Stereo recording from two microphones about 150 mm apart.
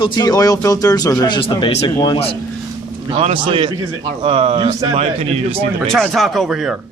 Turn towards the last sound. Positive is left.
turn(degrees=0)  # may be behind; listen again after turning